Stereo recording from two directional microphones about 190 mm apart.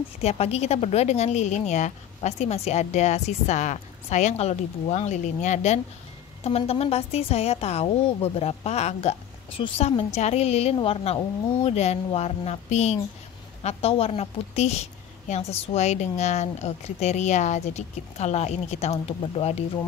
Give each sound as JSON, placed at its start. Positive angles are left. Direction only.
{"t": 0.2, "sound": "a woman's voice", "side_deg": 35}